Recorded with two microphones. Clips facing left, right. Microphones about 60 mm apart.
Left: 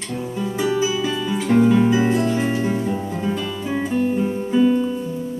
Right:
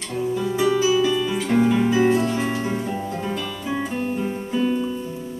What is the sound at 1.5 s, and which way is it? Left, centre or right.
Music, centre.